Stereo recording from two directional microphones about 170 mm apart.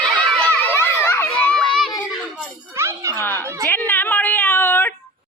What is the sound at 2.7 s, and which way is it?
Music, 15° right (ahead or behind).